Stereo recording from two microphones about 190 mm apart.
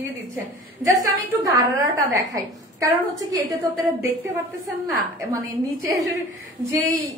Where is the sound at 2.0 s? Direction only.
15° right (ahead or behind).